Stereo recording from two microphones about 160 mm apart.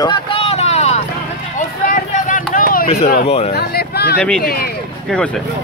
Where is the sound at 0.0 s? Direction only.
30° left (ahead or behind).